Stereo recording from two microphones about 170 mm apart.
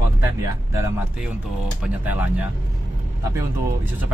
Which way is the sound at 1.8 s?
10° right (ahead or behind).